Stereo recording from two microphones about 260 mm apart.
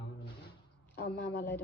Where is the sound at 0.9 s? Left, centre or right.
Left.